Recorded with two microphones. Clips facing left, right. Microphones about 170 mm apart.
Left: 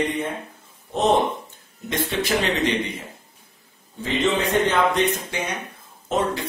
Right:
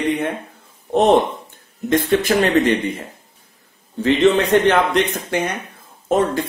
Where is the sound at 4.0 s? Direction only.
65° right (ahead or behind).